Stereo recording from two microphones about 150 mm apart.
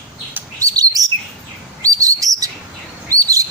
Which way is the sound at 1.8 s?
25° right (ahead or behind).